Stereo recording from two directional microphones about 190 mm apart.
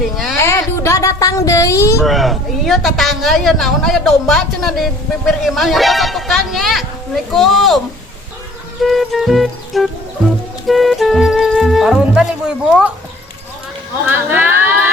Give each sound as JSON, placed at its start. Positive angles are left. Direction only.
{"t": 0.3, "sound": "speech", "side_deg": 15}
{"t": 2.0, "sound": "a man's voice", "side_deg": 0}
{"t": 8.8, "sound": "a man's voice", "side_deg": 0}
{"t": 14.1, "sound": "a sound", "side_deg": -10}